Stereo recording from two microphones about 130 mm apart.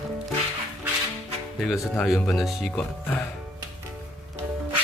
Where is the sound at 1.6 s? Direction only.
Centre (ahead or behind).